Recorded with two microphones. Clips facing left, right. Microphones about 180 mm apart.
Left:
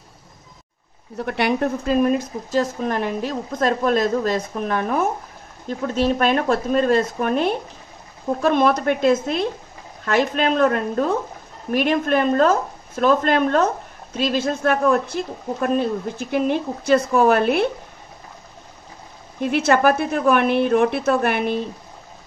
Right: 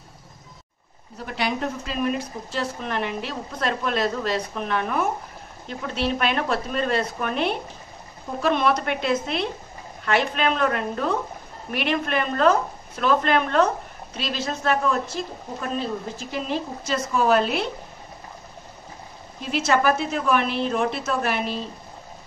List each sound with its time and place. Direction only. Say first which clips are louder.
1.1 s a woman's voice: left 6 dB; 60° left (ahead or behind)
2.0 s a woman's voice: left 5 dB; 45° left (ahead or behind); by 17.6 s 60° left (ahead or behind)
19.4 s a woman's voice: left 4 dB; 60° left (ahead or behind)